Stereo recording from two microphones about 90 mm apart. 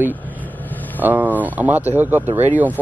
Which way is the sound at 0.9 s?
20° right (ahead or behind).